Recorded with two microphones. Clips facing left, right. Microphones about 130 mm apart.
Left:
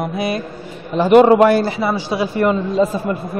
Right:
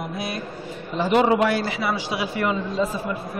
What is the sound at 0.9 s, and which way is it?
Speech, 60° left (ahead or behind).